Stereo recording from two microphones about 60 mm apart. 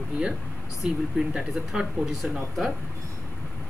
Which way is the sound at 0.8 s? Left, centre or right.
Centre.